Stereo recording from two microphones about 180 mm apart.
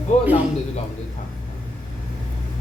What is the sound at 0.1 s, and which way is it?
Speech, 40° left (ahead or behind).